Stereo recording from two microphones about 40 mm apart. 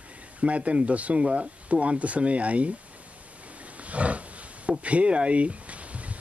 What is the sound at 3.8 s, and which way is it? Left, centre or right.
Roaring cats, right.